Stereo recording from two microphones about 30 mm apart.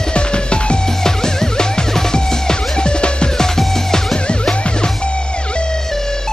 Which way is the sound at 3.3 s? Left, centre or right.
Centre.